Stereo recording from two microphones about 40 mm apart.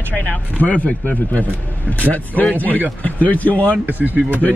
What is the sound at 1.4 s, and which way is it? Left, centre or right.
Speech, right.